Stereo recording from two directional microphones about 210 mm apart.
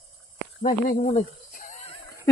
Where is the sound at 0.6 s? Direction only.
40° left (ahead or behind).